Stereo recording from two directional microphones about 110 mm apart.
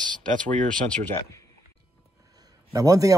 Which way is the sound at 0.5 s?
10° left (ahead or behind).